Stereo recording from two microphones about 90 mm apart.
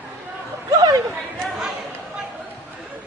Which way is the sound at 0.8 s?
45° right (ahead or behind).